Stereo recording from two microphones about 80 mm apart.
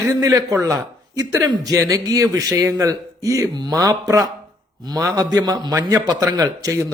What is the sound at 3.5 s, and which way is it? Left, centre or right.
Speech, right.